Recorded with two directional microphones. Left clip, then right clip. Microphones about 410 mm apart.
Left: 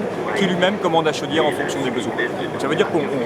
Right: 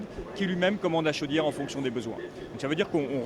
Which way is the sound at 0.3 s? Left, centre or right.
Right.